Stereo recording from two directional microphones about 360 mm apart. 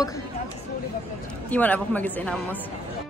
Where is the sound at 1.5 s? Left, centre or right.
Centre.